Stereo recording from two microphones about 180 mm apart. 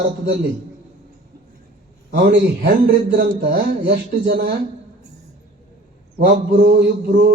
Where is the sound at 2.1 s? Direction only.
65° right (ahead or behind).